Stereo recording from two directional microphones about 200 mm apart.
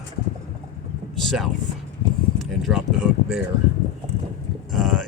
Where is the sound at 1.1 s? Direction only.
Centre (ahead or behind).